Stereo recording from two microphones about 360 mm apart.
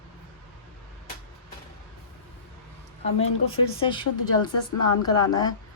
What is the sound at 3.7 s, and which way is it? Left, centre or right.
Speech, centre.